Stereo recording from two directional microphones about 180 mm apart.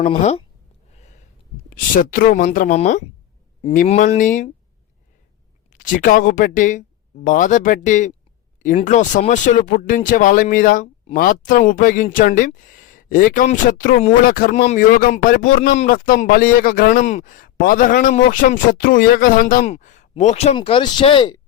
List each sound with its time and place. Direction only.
0.0 s speech: 40° left (ahead or behind)
0.9 s a sound: 40° left (ahead or behind)
2.0 s speech: 55° left (ahead or behind)
5.7 s speech: 50° left (ahead or behind); by 21.4 s 25° left (ahead or behind)